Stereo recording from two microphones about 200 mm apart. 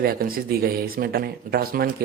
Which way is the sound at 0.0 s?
45° right (ahead or behind).